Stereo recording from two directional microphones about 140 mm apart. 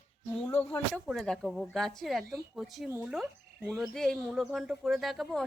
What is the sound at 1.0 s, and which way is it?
Speech, 5° left (ahead or behind).